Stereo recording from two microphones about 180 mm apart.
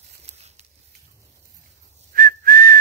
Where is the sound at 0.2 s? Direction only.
35° right (ahead or behind).